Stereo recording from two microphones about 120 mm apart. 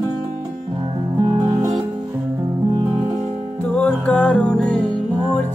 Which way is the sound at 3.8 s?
10° left (ahead or behind).